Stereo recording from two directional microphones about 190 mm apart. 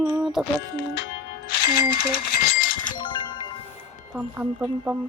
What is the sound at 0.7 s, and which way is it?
Speech, 65° left (ahead or behind).